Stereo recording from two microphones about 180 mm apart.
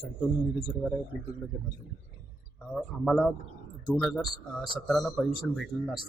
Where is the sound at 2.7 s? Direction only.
Centre (ahead or behind).